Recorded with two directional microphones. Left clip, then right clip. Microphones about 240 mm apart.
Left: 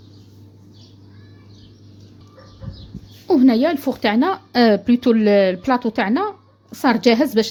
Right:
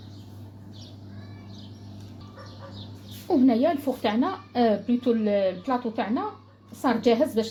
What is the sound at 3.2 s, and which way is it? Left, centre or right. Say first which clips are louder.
Speech: left 6 dB; left.